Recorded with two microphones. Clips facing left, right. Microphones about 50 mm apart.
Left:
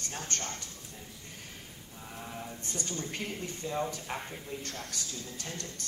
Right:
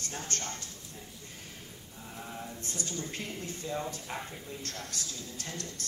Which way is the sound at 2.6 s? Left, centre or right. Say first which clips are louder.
Left 1 dB; left.